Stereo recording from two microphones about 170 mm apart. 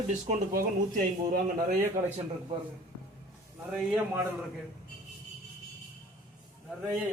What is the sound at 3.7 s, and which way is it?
Speech, 10° right (ahead or behind).